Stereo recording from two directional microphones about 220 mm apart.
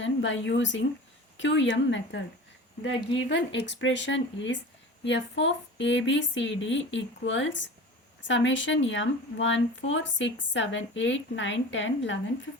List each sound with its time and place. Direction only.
0.0 s speech: 55° left (ahead or behind)
3.2 s speech: 55° left (ahead or behind)